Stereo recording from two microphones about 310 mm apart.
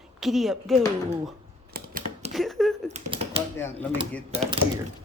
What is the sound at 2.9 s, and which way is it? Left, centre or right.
Speech, centre.